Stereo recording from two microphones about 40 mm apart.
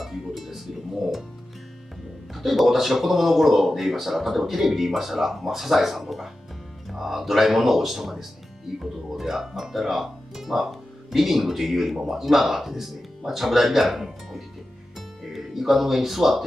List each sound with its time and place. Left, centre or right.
0.0 s music: centre
2.3 s speech: centre
15.0 s music: centre